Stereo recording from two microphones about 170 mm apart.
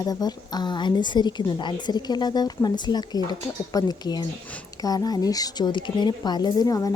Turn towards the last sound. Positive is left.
turn(degrees=20)  # may be behind; listen again after turning